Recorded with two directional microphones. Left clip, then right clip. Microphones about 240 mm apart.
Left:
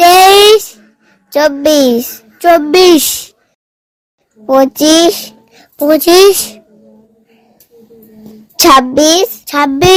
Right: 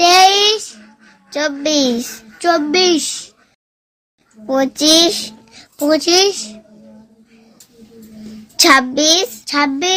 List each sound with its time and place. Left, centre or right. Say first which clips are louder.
0.0 s child singing: left 6 dB; left
1.3 s a child's voice: left 9 dB; left
4.4 s a child's voice: left 6 dB; left
8.5 s a child's voice: left 5 dB; left